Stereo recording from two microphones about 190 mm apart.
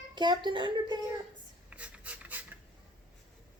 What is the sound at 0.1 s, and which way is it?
Speech, 25° right (ahead or behind).